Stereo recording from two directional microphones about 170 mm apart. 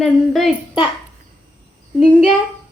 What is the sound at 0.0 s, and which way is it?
Speech, centre (ahead or behind).